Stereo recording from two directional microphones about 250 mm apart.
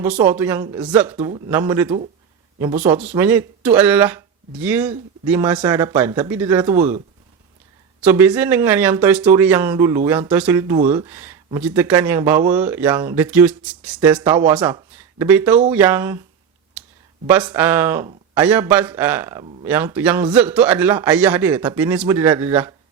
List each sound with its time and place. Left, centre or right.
0.0 s speech: centre
8.0 s speech: centre
14.2 s speech: centre
14.5 s speech: centre
17.2 s speech: centre